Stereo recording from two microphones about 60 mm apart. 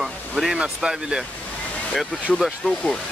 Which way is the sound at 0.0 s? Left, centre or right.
Centre.